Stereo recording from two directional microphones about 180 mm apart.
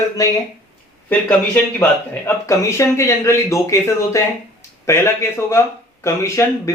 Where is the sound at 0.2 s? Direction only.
20° left (ahead or behind).